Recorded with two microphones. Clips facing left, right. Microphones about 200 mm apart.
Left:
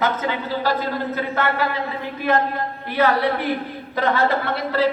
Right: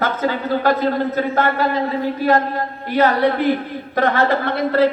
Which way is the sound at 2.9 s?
45° right (ahead or behind).